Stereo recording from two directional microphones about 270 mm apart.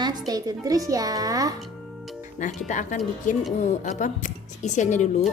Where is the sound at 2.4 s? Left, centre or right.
Left.